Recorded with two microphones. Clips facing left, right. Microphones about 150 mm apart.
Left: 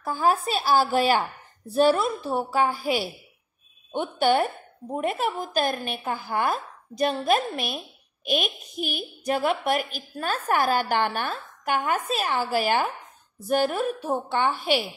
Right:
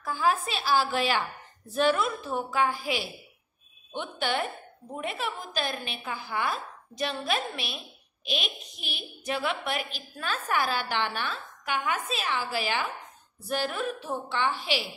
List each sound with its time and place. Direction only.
0.0 s a woman's voice: 40° left (ahead or behind)